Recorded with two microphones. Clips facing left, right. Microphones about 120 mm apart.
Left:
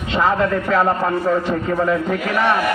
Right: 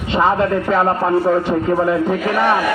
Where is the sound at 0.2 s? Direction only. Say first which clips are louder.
Right 2 dB; 25° right (ahead or behind).